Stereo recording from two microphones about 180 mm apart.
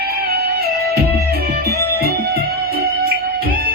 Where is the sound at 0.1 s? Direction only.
60° right (ahead or behind).